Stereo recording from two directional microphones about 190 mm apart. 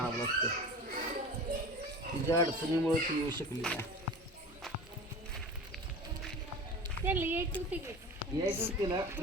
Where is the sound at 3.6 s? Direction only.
5° left (ahead or behind).